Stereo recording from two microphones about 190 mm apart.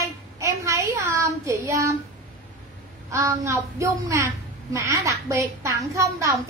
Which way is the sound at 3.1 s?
15° right (ahead or behind).